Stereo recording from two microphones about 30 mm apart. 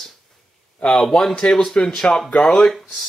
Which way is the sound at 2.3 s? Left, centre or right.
Left.